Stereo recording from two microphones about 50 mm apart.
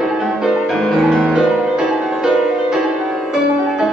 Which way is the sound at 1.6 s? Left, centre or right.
Centre.